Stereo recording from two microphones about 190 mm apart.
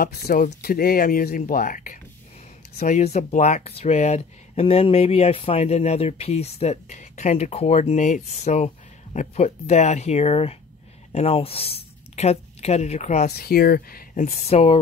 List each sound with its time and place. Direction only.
0.0 s speech: 50° left (ahead or behind); by 13.3 s 35° left (ahead or behind)
13.3 s speech: 55° left (ahead or behind); by 14.8 s 35° left (ahead or behind)